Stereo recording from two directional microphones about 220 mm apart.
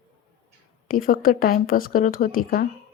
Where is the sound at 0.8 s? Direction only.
40° left (ahead or behind).